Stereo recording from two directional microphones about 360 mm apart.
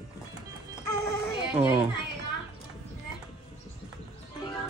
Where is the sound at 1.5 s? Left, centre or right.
Centre.